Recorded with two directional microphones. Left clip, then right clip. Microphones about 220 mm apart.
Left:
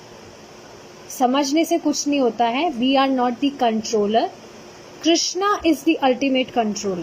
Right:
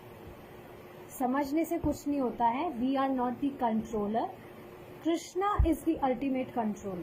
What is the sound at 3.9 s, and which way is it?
Speech, 55° left (ahead or behind).